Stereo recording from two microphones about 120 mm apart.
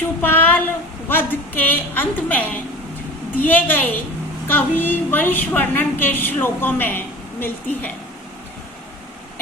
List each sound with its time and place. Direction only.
0.2 s child singing: 15° left (ahead or behind)
1.0 s a woman's voice: 15° left (ahead or behind)